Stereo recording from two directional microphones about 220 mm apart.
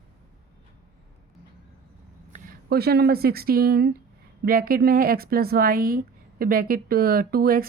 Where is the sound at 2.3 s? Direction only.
45° right (ahead or behind).